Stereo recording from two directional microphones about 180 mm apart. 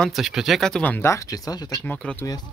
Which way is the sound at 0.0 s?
Centre (ahead or behind).